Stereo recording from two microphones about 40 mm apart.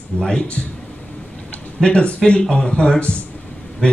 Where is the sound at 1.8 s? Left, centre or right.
Left.